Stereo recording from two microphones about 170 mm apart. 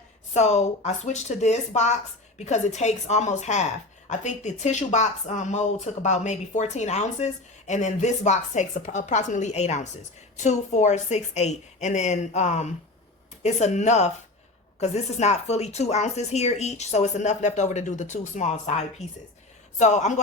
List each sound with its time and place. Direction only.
0.3 s speech: 40° left (ahead or behind)